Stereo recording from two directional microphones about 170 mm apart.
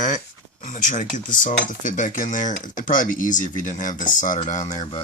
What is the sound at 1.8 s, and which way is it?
Speech, 50° left (ahead or behind).